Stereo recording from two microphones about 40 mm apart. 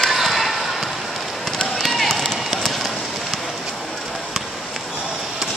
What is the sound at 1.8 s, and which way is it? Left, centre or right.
Run, centre.